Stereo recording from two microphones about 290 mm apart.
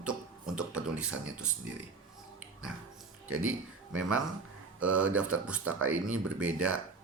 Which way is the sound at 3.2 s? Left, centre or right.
Right.